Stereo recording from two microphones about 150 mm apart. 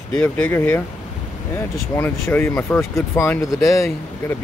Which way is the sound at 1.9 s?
15° left (ahead or behind).